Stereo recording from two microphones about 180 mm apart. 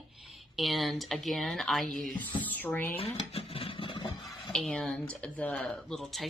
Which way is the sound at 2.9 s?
30° left (ahead or behind).